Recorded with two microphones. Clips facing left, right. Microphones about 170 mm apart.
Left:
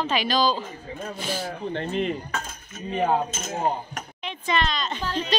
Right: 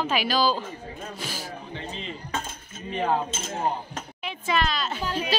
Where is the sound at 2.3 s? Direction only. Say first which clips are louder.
Even; 25° right (ahead or behind).